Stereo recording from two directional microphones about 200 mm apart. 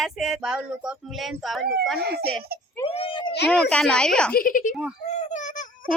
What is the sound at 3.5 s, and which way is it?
Speech, 5° left (ahead or behind).